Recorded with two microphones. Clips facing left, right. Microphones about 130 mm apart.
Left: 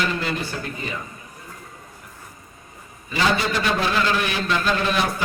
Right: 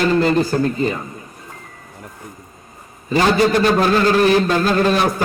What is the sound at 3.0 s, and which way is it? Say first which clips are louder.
A man's voice: right 7 dB; 45° right (ahead or behind).